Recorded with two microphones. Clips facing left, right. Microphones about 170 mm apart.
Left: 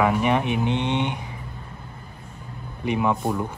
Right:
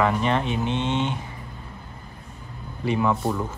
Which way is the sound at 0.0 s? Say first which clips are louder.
Left 2 dB; 10° left (ahead or behind).